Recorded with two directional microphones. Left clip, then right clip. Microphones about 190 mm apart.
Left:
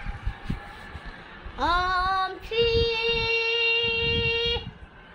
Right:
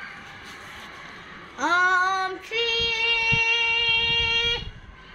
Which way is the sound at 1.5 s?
25° left (ahead or behind).